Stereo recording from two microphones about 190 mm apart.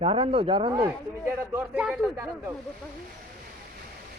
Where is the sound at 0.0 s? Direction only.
30° right (ahead or behind).